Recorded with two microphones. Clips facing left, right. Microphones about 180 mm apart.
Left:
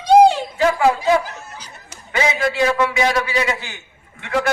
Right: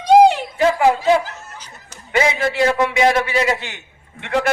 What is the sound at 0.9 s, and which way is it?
Snicker, 15° left (ahead or behind).